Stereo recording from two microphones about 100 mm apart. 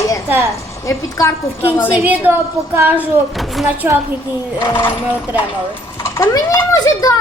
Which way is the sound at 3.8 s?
20° right (ahead or behind).